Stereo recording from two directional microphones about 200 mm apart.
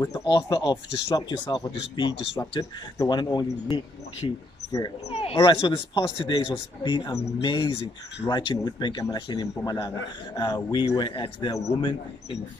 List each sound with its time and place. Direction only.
0.0 s speech: 20° left (ahead or behind)
5.1 s speech: 30° left (ahead or behind)